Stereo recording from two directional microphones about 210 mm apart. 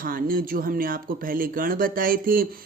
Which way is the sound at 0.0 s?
40° right (ahead or behind).